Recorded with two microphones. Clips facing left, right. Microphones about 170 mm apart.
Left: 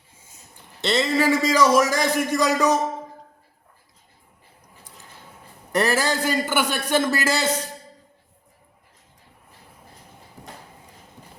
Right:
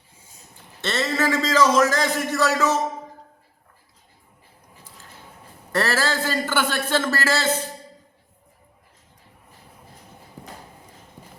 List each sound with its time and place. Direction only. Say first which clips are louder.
0.8 s a man's voice: left 3 dB; 15° left (ahead or behind)
5.7 s a man's voice: left 2 dB; 15° left (ahead or behind)